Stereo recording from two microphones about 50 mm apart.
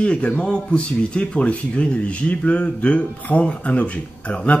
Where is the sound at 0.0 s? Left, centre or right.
Left.